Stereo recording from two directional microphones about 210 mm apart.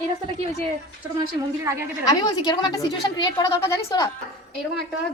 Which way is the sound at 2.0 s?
15° left (ahead or behind).